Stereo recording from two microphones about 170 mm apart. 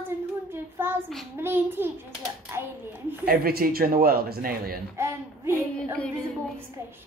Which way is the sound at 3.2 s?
60° right (ahead or behind).